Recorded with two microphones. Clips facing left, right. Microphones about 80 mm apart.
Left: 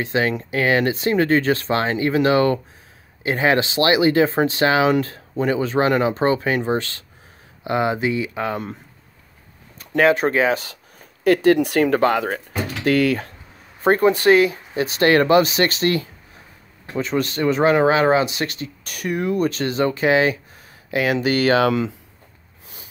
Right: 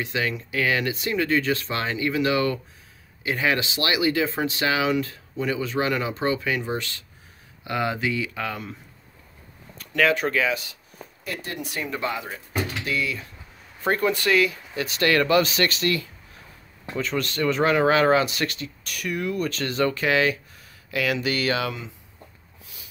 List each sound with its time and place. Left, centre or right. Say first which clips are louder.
0.0 s speech: left 6 dB; left
7.6 s speech: left 5 dB; left
9.9 s speech: left 5 dB; left
11.2 s speech: left 18 dB; left
13.8 s speech: left 8 dB; left
16.9 s speech: left 5 dB; left
18.4 s speech: left 2 dB; left